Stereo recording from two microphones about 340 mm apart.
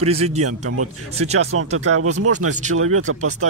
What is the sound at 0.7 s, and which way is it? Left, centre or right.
Speech, right.